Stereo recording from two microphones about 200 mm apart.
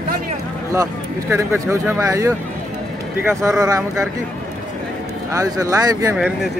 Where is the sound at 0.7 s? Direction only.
15° right (ahead or behind).